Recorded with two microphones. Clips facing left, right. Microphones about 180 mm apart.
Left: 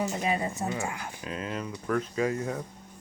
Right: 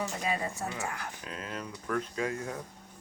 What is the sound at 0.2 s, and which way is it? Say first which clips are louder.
Speech: left 4 dB; 20° left (ahead or behind).